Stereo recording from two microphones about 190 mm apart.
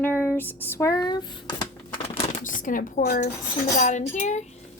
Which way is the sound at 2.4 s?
45° left (ahead or behind).